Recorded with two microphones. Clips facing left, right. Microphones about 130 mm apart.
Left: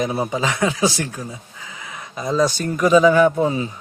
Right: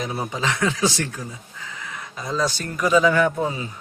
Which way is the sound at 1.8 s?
15° left (ahead or behind).